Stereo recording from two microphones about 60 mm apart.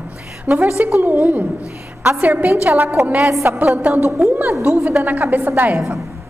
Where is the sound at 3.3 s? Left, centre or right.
Right.